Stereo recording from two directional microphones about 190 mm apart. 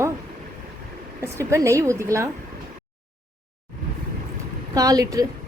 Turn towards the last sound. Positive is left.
turn(degrees=-20)  # may be behind; listen again after turning